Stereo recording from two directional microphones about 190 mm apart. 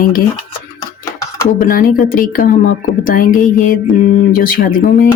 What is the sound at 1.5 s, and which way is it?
A woman's voice, 45° left (ahead or behind).